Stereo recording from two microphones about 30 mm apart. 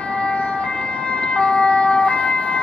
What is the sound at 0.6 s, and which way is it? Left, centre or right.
Ambulance, left.